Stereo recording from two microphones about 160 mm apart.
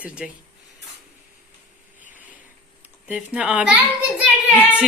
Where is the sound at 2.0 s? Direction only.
55° left (ahead or behind).